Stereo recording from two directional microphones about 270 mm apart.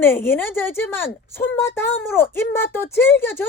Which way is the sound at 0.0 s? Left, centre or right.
Centre.